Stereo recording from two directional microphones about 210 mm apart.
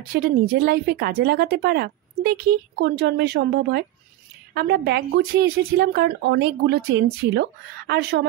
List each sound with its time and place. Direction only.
0.1 s a woman's voice: 45° right (ahead or behind)